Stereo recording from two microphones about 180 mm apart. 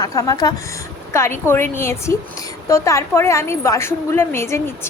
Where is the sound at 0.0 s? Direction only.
20° left (ahead or behind).